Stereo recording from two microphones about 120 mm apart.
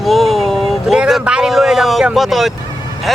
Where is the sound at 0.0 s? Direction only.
Centre (ahead or behind).